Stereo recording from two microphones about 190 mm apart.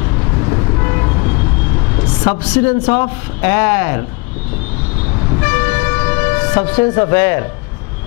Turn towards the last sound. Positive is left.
turn(degrees=15)  # may be behind; listen again after turning